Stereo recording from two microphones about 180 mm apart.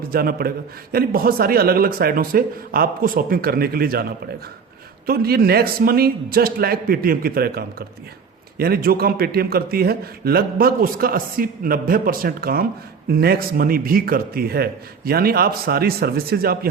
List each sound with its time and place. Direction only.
0.1 s a man's voice: 55° right (ahead or behind)
5.0 s a man's voice: 60° right (ahead or behind)